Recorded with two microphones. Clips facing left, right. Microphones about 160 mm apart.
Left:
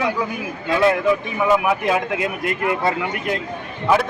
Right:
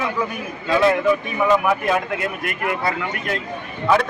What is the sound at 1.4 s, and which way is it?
Speech, 5° left (ahead or behind).